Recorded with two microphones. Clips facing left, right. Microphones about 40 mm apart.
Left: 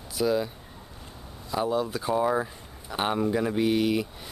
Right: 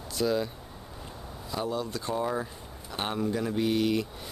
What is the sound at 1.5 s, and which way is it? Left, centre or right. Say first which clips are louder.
Speech: left 5 dB; centre.